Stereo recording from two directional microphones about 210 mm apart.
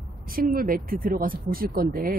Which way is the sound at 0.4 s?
45° right (ahead or behind).